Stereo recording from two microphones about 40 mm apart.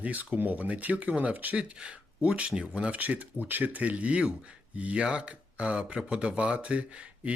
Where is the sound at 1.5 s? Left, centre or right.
Right.